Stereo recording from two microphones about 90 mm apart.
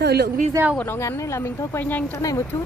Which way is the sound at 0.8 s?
30° left (ahead or behind).